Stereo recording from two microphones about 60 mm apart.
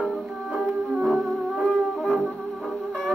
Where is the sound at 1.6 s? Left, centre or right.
Centre.